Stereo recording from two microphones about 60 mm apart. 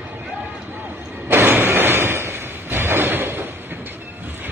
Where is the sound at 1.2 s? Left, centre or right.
Right.